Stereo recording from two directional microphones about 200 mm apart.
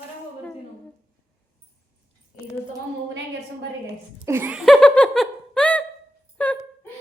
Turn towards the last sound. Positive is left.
turn(degrees=10)  # may be behind; listen again after turning